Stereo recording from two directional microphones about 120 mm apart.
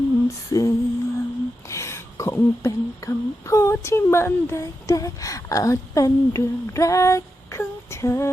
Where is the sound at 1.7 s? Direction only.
25° left (ahead or behind).